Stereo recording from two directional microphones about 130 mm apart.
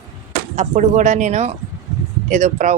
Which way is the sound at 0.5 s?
70° right (ahead or behind).